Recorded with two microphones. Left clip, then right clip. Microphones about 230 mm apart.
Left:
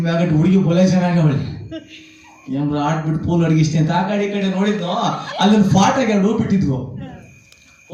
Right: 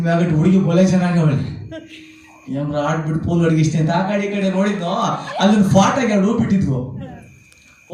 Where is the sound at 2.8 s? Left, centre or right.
Centre.